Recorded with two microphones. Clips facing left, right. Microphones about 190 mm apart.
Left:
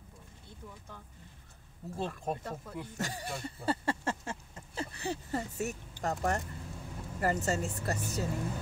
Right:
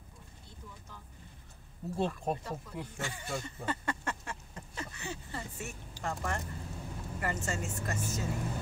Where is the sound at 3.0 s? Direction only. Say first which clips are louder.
Left 1 dB; 40° left (ahead or behind).